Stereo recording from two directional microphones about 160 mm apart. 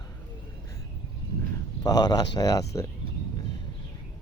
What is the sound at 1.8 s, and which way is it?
Speech, 25° left (ahead or behind).